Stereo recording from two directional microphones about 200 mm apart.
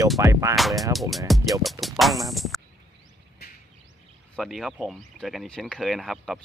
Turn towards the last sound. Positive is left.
turn(degrees=0)  # may be behind; listen again after turning